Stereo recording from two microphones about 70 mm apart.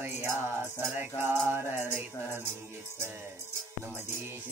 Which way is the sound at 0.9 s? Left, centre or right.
Right.